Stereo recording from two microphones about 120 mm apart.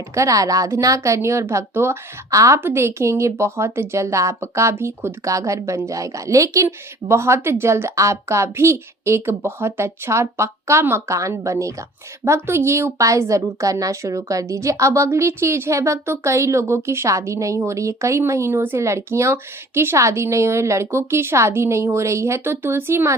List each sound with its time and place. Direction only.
0.1 s speech: 25° right (ahead or behind)